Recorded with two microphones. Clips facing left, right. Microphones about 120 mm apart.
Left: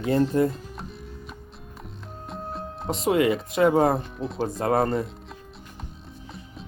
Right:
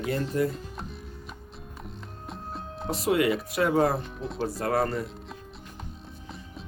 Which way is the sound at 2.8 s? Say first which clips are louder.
Left 3 dB; 20° left (ahead or behind).